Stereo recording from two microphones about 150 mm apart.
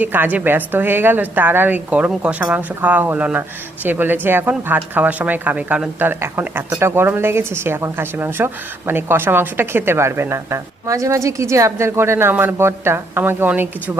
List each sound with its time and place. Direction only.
0.0 s speech: 10° right (ahead or behind)